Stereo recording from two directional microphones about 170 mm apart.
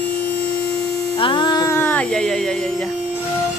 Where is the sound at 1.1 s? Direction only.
30° left (ahead or behind); by 2.6 s 5° left (ahead or behind).